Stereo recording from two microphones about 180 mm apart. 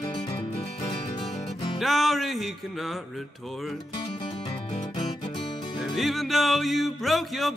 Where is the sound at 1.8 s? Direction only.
Centre (ahead or behind).